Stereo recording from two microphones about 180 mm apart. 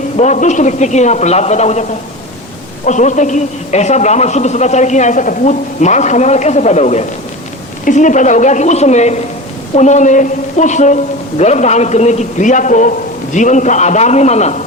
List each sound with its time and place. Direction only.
0.2 s a man's voice: 40° left (ahead or behind)